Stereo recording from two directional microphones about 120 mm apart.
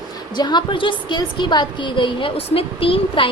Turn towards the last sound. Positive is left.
turn(degrees=50)  # may be behind; listen again after turning